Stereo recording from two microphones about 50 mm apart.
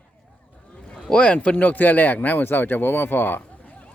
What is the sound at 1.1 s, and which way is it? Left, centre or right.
Speech, left.